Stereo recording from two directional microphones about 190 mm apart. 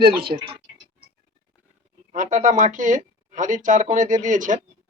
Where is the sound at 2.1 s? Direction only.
40° right (ahead or behind).